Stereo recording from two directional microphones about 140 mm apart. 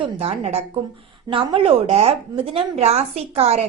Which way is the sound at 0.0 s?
50° right (ahead or behind).